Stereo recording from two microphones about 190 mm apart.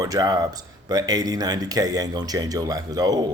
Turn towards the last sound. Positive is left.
turn(degrees=-20)  # may be behind; listen again after turning